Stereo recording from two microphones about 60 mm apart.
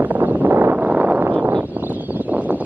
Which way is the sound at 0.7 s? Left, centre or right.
Right.